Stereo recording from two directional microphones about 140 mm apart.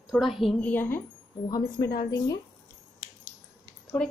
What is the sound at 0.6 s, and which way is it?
Speech, 15° left (ahead or behind).